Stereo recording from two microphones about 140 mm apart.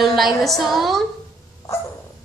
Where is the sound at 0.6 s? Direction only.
Centre (ahead or behind).